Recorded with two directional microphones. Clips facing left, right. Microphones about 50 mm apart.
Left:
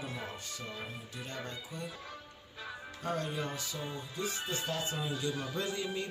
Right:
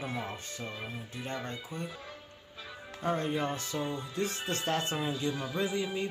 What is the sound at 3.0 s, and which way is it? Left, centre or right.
Speech, right.